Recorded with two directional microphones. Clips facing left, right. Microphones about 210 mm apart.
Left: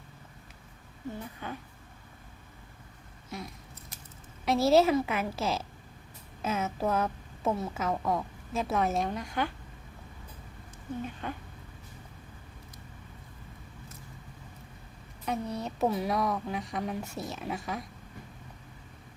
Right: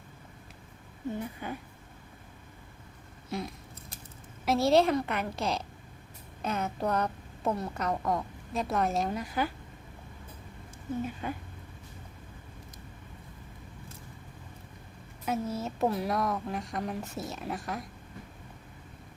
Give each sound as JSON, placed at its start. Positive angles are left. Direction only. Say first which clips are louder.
{"t": 1.4, "sound": "speech", "louder": "right 2 dB", "side_deg": -10}
{"t": 3.3, "sound": "a sound", "louder": "right 5 dB", "side_deg": -30}
{"t": 4.4, "sound": "a woman's voice", "louder": "left 1 dB", "side_deg": 0}
{"t": 11.0, "sound": "speech", "louder": "right 2 dB", "side_deg": -10}
{"t": 15.2, "sound": "a woman's voice", "louder": "right 1 dB", "side_deg": -5}